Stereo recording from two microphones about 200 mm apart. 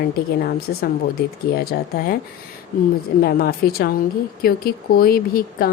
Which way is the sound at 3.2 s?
50° left (ahead or behind).